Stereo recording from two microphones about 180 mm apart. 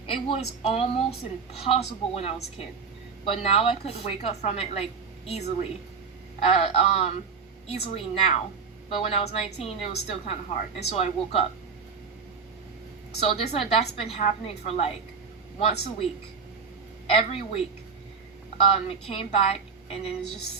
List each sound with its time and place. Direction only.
0.1 s a woman's voice: 30° left (ahead or behind)
6.4 s a woman's voice: 35° left (ahead or behind)
13.1 s a woman's voice: 35° left (ahead or behind)
17.1 s a woman's voice: 35° left (ahead or behind)